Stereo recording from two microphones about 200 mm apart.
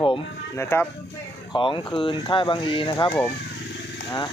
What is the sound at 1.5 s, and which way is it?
Speech, 25° left (ahead or behind).